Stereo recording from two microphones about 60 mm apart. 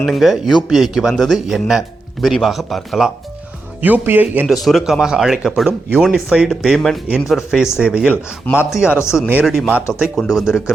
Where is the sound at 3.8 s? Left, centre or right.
Right.